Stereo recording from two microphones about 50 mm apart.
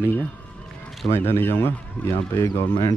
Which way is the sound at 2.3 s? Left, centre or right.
Left.